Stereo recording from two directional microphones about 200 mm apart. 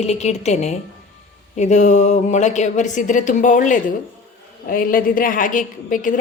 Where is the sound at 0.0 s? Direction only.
35° left (ahead or behind).